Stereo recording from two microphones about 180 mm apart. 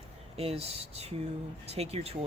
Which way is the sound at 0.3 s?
35° right (ahead or behind).